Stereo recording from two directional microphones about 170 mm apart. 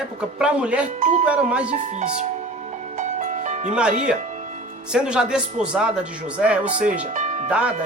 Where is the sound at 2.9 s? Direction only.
45° right (ahead or behind).